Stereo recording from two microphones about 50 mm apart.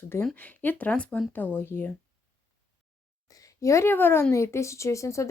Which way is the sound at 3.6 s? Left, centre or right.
Left.